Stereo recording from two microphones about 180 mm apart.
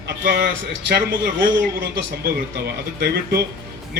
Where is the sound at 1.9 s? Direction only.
60° right (ahead or behind).